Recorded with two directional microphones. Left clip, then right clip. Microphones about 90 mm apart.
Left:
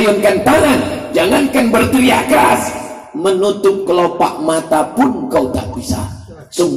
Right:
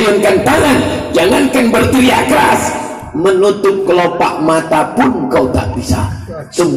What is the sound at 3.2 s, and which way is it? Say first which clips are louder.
Music: right 3 dB; 30° left (ahead or behind).